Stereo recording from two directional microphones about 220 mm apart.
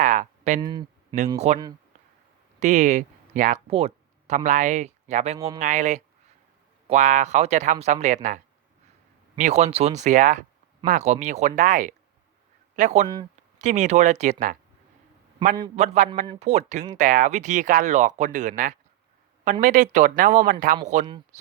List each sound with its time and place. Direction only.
0.0 s a sound: 35° right (ahead or behind)
0.6 s speech: 20° right (ahead or behind)
1.5 s speech: 30° right (ahead or behind)
9.4 s speech: 30° right (ahead or behind)
15.7 s speech: 30° right (ahead or behind)